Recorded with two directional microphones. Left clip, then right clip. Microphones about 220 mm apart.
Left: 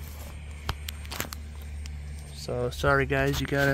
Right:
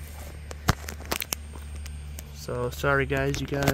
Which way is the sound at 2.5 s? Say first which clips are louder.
Even; 5° right (ahead or behind).